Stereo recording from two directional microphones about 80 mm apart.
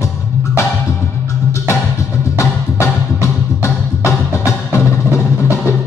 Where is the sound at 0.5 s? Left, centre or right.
Left.